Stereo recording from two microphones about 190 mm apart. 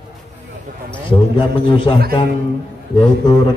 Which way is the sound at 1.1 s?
25° left (ahead or behind).